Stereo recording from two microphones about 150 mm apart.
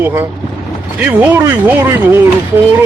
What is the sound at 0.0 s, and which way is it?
Speech, 10° right (ahead or behind).